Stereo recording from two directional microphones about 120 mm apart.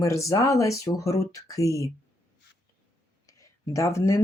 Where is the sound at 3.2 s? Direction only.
25° left (ahead or behind).